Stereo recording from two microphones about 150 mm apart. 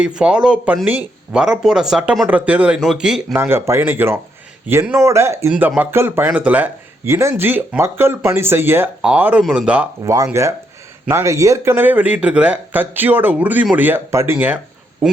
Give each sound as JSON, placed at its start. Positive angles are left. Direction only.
{"t": 0.0, "sound": "speech", "side_deg": -5}
{"t": 3.3, "sound": "speech", "side_deg": -15}
{"t": 10.0, "sound": "speech", "side_deg": -25}